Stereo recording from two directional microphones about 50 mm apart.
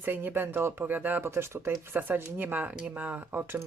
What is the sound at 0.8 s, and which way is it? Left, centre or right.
Speech, right.